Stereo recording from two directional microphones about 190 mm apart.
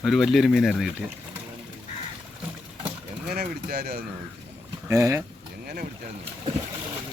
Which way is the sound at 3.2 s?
55° right (ahead or behind).